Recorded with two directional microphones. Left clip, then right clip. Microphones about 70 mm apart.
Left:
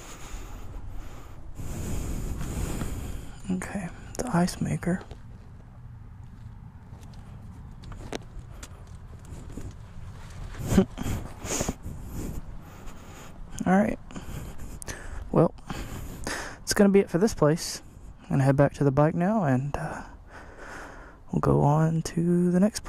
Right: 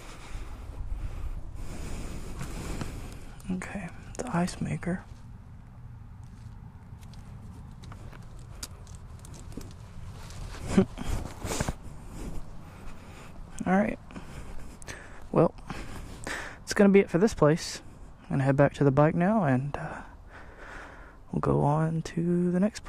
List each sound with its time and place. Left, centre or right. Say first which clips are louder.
0.0 s vehicle: left 2 dB; left
1.6 s waves: left 5 dB; left
2.4 s a sound: left 2 dB; left
9.6 s vehicle: even; left
10.6 s a sound: left 2 dB; left
12.8 s writing: left 3 dB; left
16.3 s speech: left 3 dB; left